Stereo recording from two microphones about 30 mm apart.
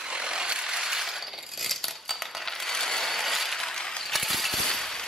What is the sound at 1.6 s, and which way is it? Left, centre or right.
Coin, centre.